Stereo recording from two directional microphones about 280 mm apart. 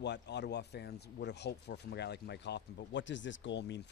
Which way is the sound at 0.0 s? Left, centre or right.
Left.